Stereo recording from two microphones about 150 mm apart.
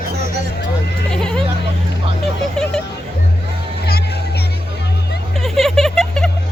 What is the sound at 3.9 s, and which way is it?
Music, 90° left.